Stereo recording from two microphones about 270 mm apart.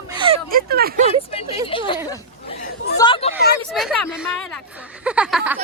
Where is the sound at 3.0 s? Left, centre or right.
Centre.